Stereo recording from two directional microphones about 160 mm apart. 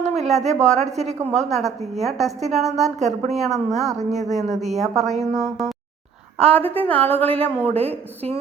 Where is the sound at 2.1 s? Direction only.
Centre (ahead or behind).